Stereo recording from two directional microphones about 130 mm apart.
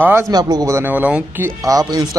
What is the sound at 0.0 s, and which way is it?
Speech, 20° right (ahead or behind).